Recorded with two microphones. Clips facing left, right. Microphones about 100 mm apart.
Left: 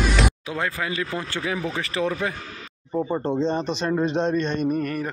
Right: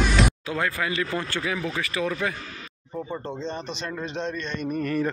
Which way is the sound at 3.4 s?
50° left (ahead or behind).